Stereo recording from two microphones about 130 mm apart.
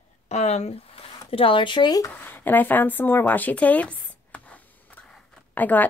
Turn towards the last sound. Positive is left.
turn(degrees=15)  # may be behind; listen again after turning